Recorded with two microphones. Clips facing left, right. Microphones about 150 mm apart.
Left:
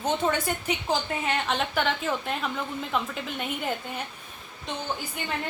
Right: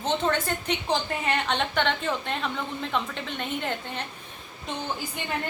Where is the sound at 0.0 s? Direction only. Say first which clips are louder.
Even; 10° left (ahead or behind).